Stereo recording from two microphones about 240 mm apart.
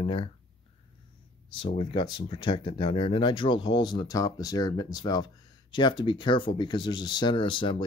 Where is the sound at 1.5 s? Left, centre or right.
Left.